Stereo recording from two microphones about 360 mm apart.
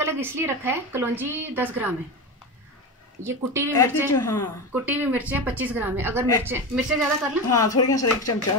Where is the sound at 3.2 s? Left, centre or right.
Centre.